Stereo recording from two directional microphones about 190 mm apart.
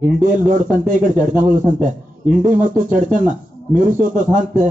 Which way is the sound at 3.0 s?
45° right (ahead or behind).